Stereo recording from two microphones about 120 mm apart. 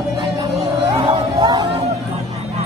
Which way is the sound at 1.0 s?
40° right (ahead or behind).